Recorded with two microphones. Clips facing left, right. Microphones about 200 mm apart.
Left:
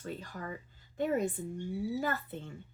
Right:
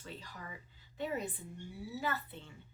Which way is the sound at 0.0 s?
50° left (ahead or behind).